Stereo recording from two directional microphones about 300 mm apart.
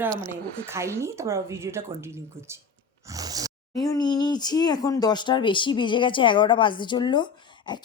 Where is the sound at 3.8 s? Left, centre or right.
Centre.